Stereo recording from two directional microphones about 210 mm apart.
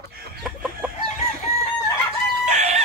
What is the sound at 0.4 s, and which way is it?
Chicken, 5° right (ahead or behind).